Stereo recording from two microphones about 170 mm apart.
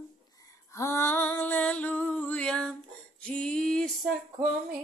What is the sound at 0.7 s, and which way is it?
Female singing, 15° left (ahead or behind).